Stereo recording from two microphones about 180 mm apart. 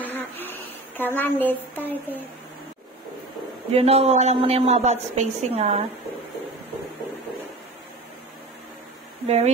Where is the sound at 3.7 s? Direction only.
35° right (ahead or behind).